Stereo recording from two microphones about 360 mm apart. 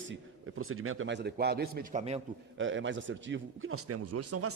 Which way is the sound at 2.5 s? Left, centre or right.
Right.